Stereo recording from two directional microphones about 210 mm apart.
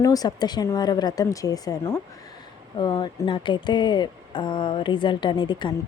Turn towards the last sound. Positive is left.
turn(degrees=20)  # may be behind; listen again after turning